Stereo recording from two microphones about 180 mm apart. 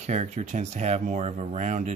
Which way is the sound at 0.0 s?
40° right (ahead or behind).